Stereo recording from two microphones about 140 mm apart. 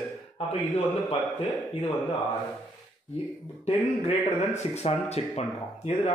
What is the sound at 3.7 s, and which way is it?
Speech, 45° left (ahead or behind).